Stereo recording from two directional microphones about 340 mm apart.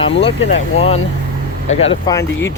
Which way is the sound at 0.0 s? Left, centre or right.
Centre.